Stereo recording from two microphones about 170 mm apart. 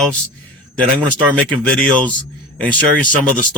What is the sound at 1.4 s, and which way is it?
Speech, 5° left (ahead or behind).